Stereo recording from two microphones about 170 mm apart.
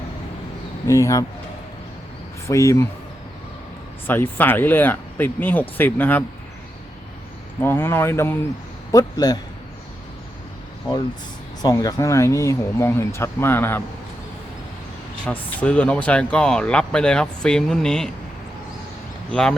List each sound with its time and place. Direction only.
0.9 s a man's voice: 20° left (ahead or behind)
2.5 s speech: 15° left (ahead or behind)
4.0 s speech: 10° left (ahead or behind)
7.6 s a man's voice: 15° left (ahead or behind)
10.9 s a man's voice: 25° left (ahead or behind)
15.3 s speech: 10° left (ahead or behind)
19.3 s speech: 5° left (ahead or behind)